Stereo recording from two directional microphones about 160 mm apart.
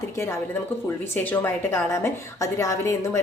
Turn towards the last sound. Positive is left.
turn(degrees=20)  # may be behind; listen again after turning